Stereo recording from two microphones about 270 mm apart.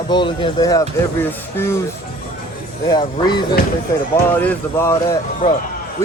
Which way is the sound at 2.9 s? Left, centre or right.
Centre.